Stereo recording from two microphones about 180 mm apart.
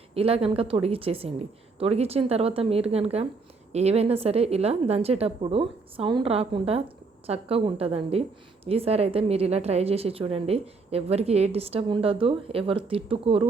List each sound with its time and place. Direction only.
0.1 s a woman's voice: 35° right (ahead or behind)